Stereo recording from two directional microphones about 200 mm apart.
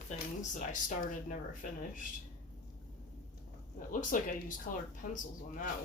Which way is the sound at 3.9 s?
45° left (ahead or behind).